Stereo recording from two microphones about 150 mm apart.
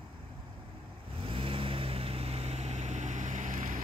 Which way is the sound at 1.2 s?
35° right (ahead or behind).